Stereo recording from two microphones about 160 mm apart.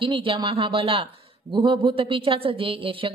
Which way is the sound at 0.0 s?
35° right (ahead or behind).